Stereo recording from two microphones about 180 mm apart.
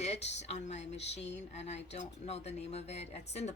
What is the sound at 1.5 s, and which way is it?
Speech, 40° left (ahead or behind).